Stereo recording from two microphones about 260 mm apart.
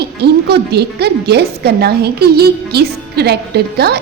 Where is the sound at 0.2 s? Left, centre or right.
Right.